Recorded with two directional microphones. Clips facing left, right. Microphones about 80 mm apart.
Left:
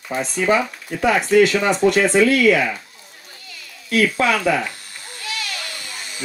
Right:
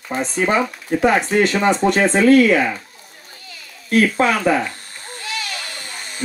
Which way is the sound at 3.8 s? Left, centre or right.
Right.